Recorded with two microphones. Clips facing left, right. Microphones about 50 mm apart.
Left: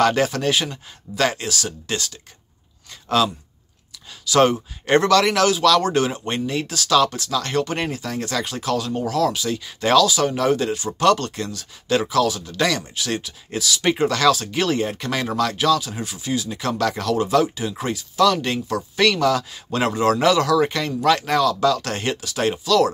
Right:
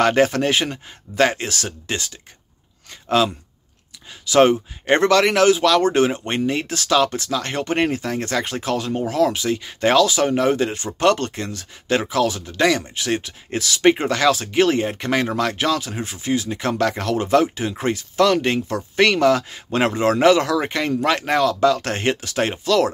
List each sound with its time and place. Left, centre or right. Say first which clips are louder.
0.0 s speech: right 2 dB; right